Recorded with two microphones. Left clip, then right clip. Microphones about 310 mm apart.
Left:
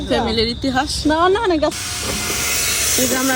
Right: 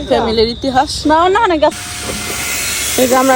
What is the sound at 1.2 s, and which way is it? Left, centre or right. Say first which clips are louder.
Speech: right 3 dB; right.